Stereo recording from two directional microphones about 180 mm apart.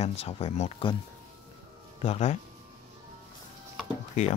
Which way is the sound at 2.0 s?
35° left (ahead or behind).